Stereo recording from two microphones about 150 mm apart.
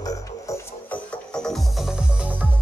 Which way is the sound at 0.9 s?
5° left (ahead or behind).